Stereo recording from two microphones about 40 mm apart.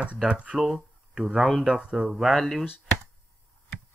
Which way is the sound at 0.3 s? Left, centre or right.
Right.